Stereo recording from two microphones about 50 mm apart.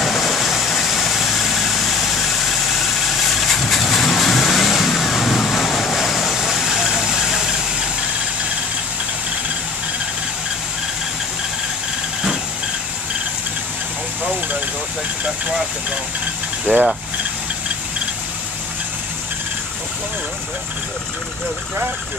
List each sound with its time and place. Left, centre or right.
0.0 s vehicle: centre
3.3 s vehicle: centre
16.7 s speech: right